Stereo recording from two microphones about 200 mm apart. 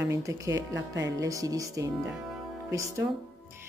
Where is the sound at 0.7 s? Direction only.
65° right (ahead or behind).